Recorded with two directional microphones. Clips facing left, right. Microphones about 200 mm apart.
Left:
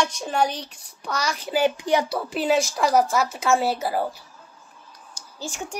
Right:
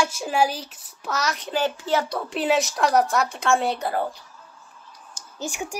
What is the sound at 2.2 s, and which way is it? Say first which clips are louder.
A woman's voice: left 1 dB; centre (ahead or behind).